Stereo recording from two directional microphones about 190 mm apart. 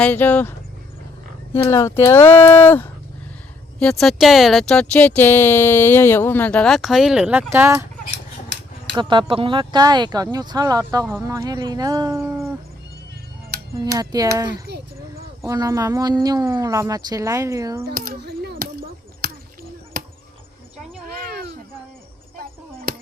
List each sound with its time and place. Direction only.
0.0 s speech: 10° left (ahead or behind)
1.5 s speech: 15° left (ahead or behind); by 7.9 s 15° right (ahead or behind)
9.0 s speech: 25° right (ahead or behind)
13.7 s speech: 20° right (ahead or behind)
14.7 s speech: 60° right (ahead or behind)
15.4 s speech: 15° right (ahead or behind)
17.8 s chop: 50° right (ahead or behind)
21.1 s a sound: 50° right (ahead or behind)
22.9 s a sound: 50° right (ahead or behind)